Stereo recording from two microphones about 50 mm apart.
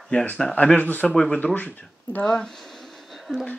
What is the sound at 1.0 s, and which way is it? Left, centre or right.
Speech, centre.